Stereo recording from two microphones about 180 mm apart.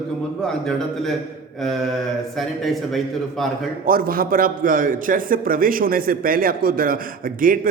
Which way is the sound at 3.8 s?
55° right (ahead or behind).